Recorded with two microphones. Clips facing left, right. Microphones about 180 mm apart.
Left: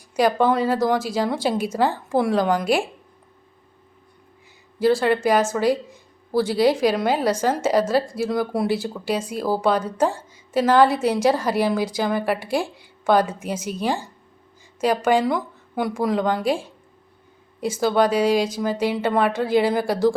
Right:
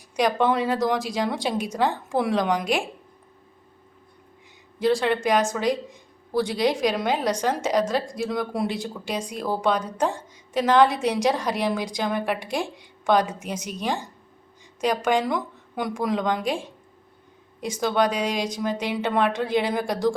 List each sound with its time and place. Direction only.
0.2 s speech: 5° left (ahead or behind)
4.8 s speech: 5° left (ahead or behind)
17.6 s speech: 5° left (ahead or behind)